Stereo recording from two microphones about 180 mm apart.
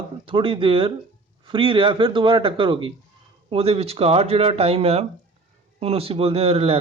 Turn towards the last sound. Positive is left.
turn(degrees=-30)  # may be behind; listen again after turning